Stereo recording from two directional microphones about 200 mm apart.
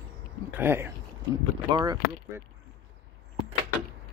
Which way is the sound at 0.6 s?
10° right (ahead or behind).